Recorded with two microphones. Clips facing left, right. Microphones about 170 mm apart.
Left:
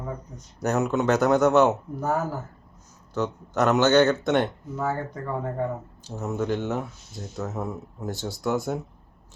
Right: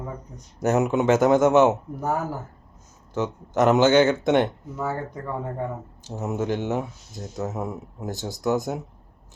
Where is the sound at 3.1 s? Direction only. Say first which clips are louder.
Right 1 dB; 20° right (ahead or behind).